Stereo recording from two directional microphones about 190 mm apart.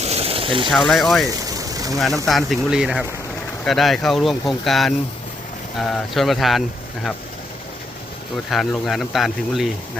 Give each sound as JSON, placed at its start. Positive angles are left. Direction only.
{"t": 0.0, "sound": "a sound", "side_deg": -35}
{"t": 0.7, "sound": "speech", "side_deg": 0}
{"t": 1.4, "sound": "vehicle", "side_deg": -20}
{"t": 2.2, "sound": "speech", "side_deg": 0}
{"t": 8.4, "sound": "speech", "side_deg": 0}